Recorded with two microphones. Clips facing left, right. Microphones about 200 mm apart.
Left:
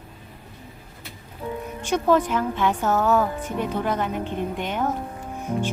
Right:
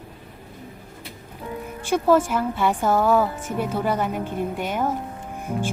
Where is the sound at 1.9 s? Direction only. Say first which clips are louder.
Right 1 dB; 10° right (ahead or behind).